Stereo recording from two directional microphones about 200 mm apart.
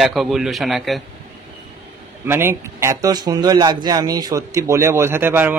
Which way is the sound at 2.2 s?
10° right (ahead or behind).